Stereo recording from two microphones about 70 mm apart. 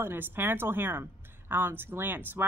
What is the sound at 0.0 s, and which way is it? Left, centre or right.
A woman's voice, right.